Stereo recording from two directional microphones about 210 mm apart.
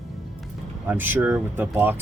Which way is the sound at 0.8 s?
10° right (ahead or behind).